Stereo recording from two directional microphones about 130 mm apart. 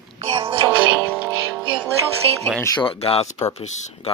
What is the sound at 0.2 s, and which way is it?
Music, 45° right (ahead or behind).